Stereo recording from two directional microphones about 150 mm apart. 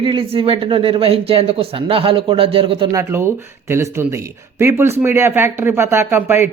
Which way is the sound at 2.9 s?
20° right (ahead or behind).